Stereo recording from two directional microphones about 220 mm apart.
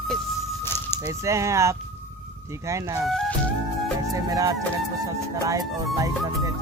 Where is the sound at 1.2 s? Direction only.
15° right (ahead or behind).